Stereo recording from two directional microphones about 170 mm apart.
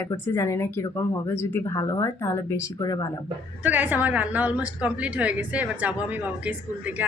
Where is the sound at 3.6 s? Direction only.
10° right (ahead or behind).